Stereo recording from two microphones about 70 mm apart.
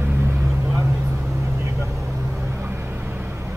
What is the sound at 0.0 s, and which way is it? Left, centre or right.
Vehicle, right.